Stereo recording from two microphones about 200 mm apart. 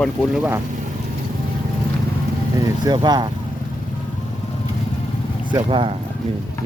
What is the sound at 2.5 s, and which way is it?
Speech, 20° right (ahead or behind).